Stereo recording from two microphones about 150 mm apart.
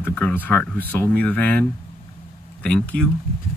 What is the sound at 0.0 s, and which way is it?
Speech, 10° left (ahead or behind).